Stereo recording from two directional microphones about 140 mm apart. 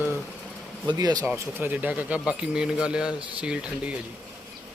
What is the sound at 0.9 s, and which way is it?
Speech, 30° right (ahead or behind).